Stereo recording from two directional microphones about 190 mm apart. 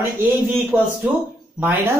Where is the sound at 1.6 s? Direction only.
10° right (ahead or behind).